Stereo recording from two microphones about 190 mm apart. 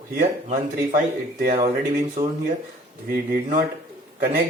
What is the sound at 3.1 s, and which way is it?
Speech, 50° right (ahead or behind).